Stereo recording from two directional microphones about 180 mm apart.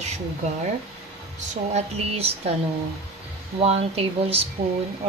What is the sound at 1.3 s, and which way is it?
Speech, 35° right (ahead or behind).